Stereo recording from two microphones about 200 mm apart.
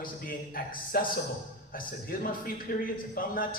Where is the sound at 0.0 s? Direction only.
45° left (ahead or behind).